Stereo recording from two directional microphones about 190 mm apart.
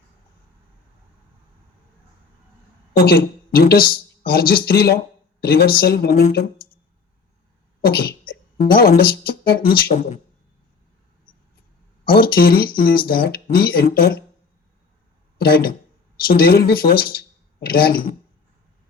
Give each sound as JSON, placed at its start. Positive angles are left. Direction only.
{"t": 2.9, "sound": "speech", "side_deg": 50}
{"t": 7.9, "sound": "a woman's voice", "side_deg": 50}
{"t": 9.9, "sound": "speech", "side_deg": 35}
{"t": 12.2, "sound": "speech", "side_deg": 50}
{"t": 15.4, "sound": "speech", "side_deg": 55}